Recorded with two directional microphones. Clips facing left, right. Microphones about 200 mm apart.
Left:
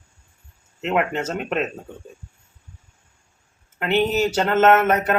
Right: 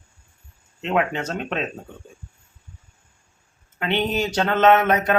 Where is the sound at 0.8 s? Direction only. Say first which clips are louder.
Left 1 dB; 5° left (ahead or behind).